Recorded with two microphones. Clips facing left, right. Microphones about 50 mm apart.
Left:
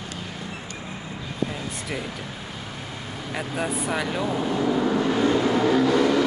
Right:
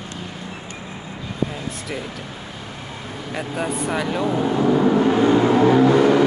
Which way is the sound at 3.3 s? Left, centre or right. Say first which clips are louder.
Right 2 dB; centre.